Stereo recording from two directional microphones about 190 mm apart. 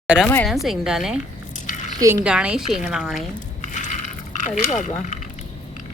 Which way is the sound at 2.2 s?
5° right (ahead or behind).